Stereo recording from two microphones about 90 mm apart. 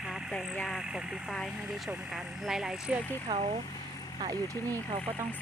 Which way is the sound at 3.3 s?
50° right (ahead or behind).